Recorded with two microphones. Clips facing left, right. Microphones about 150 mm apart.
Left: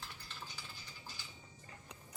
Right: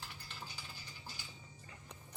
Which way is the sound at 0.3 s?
10° right (ahead or behind).